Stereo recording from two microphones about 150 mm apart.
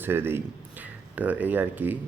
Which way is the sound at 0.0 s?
15° right (ahead or behind).